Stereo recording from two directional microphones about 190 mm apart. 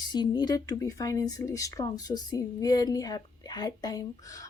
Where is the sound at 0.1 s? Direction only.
20° left (ahead or behind).